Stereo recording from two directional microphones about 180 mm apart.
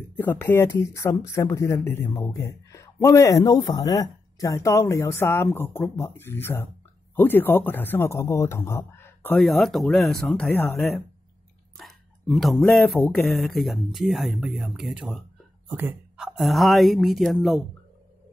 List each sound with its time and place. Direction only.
0.1 s a woman's voice: 10° left (ahead or behind)